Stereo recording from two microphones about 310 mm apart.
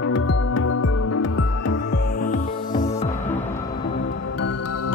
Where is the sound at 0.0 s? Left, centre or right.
Left.